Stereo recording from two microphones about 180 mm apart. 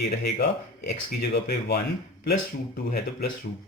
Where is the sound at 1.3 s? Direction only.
65° left (ahead or behind).